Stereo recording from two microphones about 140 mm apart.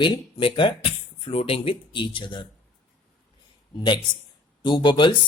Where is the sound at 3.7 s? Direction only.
30° left (ahead or behind).